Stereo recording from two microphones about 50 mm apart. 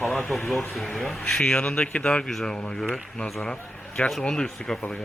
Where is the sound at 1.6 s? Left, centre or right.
Left.